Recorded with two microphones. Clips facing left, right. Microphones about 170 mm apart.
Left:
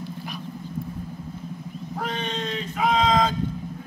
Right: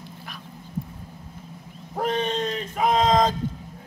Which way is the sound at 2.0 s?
45° right (ahead or behind).